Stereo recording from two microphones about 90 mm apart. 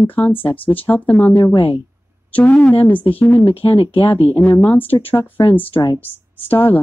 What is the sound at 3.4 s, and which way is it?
Speech, 90° left.